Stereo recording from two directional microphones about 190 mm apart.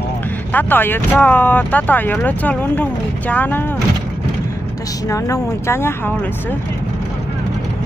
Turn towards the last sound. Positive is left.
turn(degrees=15)  # may be behind; listen again after turning